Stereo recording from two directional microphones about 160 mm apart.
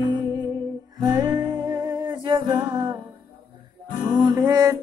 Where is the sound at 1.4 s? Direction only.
25° right (ahead or behind).